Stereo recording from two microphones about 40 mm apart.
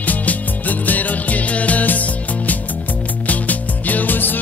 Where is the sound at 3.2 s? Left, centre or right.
Left.